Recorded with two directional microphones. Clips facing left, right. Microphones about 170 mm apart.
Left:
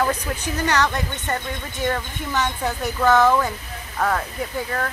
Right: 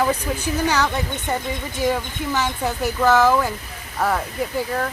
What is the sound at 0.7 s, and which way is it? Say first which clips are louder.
Speech: left 1 dB; 5° right (ahead or behind).